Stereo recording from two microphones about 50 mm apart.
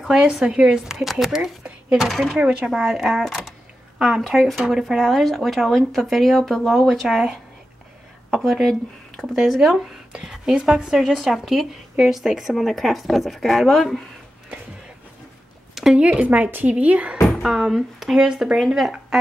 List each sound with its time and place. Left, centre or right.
0.1 s a woman's voice: centre
2.0 s speech: centre
2.3 s speech: centre
2.7 s a woman's voice: centre
4.5 s a woman's voice: centre
11.2 s speech: centre
15.7 s a sound: centre
16.0 s speech: right
16.4 s speech: right
16.7 s speech: right
17.4 s a woman's voice: centre